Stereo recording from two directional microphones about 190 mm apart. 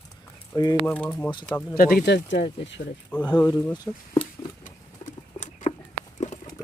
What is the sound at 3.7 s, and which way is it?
Speech, 20° left (ahead or behind).